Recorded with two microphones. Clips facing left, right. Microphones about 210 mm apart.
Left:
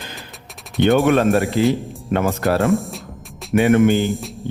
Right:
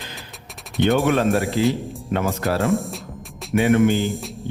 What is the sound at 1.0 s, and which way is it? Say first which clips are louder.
Speech: left 3 dB; 50° left (ahead or behind).